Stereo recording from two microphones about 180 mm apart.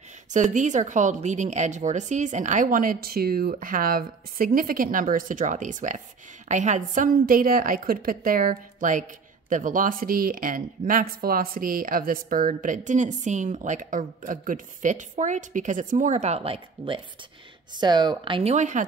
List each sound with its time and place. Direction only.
0.3 s speech: 45° right (ahead or behind)